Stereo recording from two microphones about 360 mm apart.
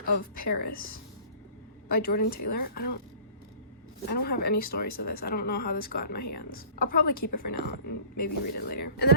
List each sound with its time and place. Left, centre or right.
0.3 s a woman's voice: left
1.9 s a woman's voice: left
4.1 s a woman's voice: left